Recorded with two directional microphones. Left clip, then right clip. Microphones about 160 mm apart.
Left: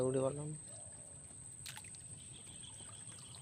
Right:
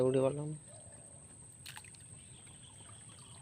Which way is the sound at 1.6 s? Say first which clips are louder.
Right 1 dB; 45° right (ahead or behind).